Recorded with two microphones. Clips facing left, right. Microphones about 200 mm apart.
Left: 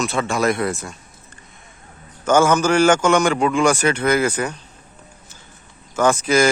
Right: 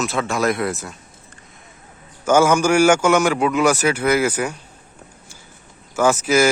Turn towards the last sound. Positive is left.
turn(degrees=-5)  # may be behind; listen again after turning